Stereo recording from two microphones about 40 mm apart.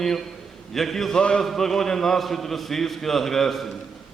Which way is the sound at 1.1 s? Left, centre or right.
Left.